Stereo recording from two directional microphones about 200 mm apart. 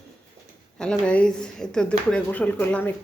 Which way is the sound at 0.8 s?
5° left (ahead or behind).